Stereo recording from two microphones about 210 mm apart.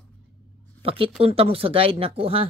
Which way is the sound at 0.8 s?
25° right (ahead or behind).